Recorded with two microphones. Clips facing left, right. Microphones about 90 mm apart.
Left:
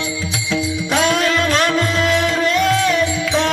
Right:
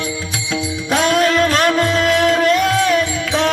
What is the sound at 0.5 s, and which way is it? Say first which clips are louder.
Music: even; 45° right (ahead or behind).